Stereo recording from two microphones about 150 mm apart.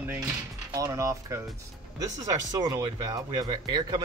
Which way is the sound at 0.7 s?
20° right (ahead or behind).